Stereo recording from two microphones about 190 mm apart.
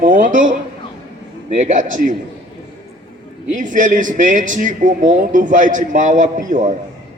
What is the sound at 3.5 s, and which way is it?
A man's voice, 40° right (ahead or behind).